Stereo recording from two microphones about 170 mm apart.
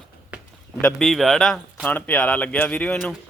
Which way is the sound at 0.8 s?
Centre (ahead or behind).